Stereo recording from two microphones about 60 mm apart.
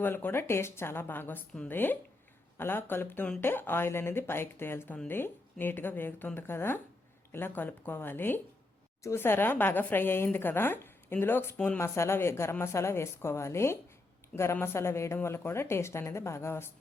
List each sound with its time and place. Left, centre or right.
0.0 s speech: left
11.8 s a woman's voice: left